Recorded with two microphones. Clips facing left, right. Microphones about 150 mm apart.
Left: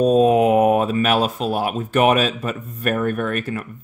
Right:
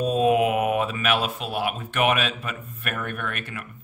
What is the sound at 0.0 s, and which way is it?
Speech, 40° left (ahead or behind).